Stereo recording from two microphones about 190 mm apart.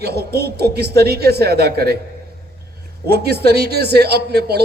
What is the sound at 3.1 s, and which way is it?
A man's voice, 60° right (ahead or behind).